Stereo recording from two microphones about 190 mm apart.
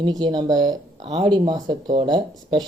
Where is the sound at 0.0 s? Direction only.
25° right (ahead or behind).